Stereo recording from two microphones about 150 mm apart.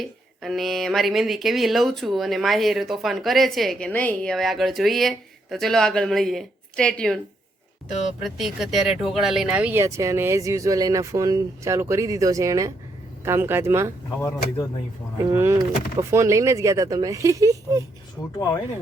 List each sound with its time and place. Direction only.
0.0 s speech: centre (ahead or behind)
8.2 s speech: centre (ahead or behind)
15.3 s speech: 20° right (ahead or behind)
18.3 s speech: 20° left (ahead or behind)